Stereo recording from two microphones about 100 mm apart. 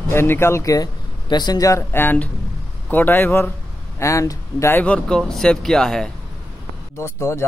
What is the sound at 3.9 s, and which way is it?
Speech, 30° left (ahead or behind).